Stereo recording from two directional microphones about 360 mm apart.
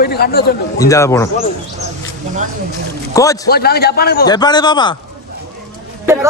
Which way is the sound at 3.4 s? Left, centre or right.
Left.